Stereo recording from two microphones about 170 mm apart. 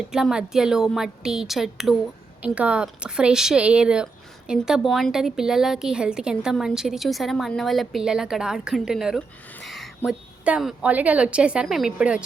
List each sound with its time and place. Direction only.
0.1 s speech: 5° right (ahead or behind)